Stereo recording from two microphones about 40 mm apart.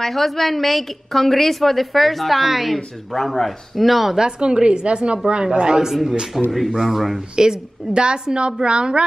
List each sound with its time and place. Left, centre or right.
0.0 s a woman's voice: centre
4.2 s a woman's voice: right; by 7.2 s centre
7.3 s a woman's voice: centre